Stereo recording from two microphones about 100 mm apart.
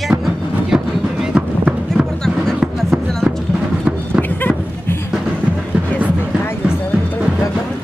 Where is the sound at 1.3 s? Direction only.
10° right (ahead or behind).